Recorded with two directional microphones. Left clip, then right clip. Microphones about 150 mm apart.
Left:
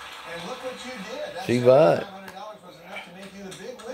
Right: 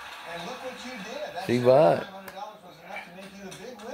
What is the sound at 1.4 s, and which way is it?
Speech, 15° left (ahead or behind).